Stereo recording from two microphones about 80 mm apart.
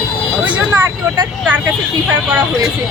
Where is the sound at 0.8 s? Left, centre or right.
Right.